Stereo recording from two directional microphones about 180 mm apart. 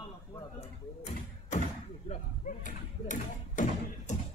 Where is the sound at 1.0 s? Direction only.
40° left (ahead or behind).